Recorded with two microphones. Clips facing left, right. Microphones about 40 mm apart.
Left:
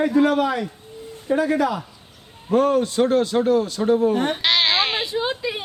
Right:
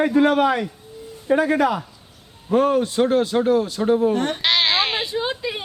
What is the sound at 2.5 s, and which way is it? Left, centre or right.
A man's voice, centre.